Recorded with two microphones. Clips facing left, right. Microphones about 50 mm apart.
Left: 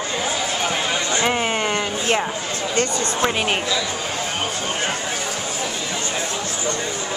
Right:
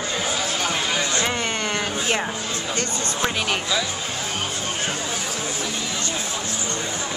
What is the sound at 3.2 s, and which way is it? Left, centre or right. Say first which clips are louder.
Speech: left 3 dB; left.